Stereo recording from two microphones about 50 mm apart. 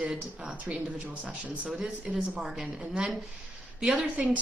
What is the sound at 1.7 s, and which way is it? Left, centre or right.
Speech, centre.